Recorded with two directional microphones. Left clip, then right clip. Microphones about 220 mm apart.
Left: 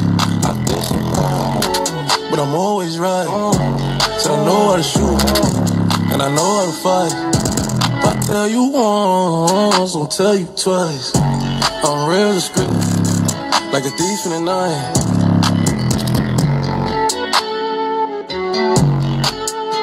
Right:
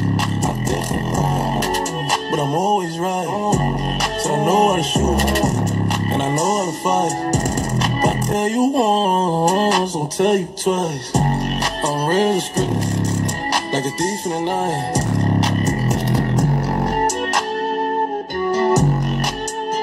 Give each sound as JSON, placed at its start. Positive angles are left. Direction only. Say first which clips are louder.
{"t": 2.3, "sound": "music", "louder": "even", "side_deg": 25}
{"t": 4.3, "sound": "music", "louder": "left 2 dB", "side_deg": 25}
{"t": 8.0, "sound": "music", "louder": "left 3 dB", "side_deg": 25}